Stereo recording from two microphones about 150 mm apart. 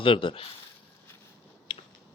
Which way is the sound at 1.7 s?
30° left (ahead or behind).